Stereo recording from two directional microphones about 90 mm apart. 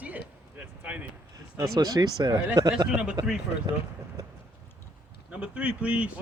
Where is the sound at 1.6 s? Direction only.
45° right (ahead or behind).